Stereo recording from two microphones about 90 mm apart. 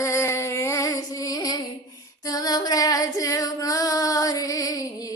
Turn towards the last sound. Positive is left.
turn(degrees=40)  # may be behind; listen again after turning